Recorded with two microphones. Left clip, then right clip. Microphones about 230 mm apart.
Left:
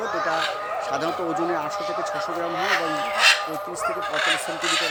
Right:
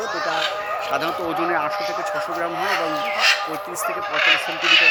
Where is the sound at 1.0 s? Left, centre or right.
Centre.